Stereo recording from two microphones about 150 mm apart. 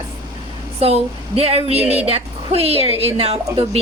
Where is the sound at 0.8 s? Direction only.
40° right (ahead or behind).